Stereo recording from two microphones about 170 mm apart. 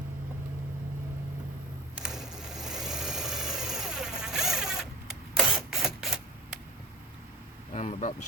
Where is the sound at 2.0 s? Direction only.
5° right (ahead or behind).